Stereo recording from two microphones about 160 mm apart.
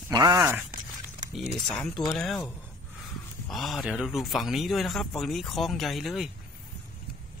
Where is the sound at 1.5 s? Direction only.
5° left (ahead or behind).